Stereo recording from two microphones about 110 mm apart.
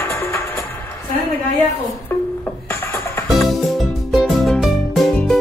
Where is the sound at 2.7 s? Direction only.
20° left (ahead or behind).